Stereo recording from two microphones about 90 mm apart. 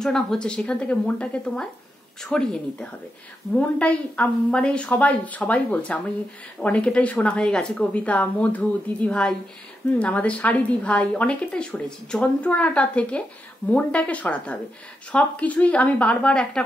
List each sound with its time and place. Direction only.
0.0 s a woman's voice: 5° left (ahead or behind)